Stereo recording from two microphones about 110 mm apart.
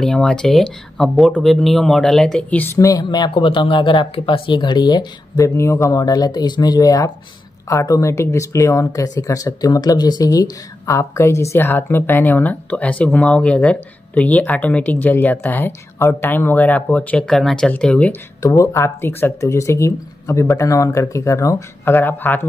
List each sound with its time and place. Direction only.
0.0 s speech: 5° left (ahead or behind)
2.6 s speech: 25° left (ahead or behind)
5.4 s speech: 25° left (ahead or behind); by 18.1 s 10° left (ahead or behind)
18.4 s speech: 30° left (ahead or behind)